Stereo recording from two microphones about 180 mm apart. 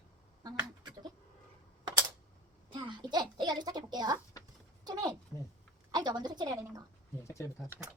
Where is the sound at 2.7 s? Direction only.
25° right (ahead or behind).